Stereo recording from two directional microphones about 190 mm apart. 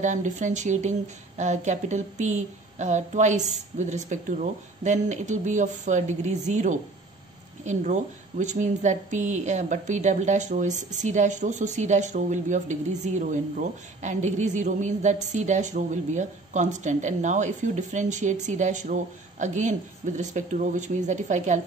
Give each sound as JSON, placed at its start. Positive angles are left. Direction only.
{"t": 0.0, "sound": "a woman's voice", "side_deg": -40}